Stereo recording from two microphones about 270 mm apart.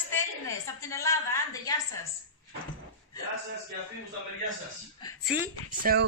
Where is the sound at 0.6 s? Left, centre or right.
Centre.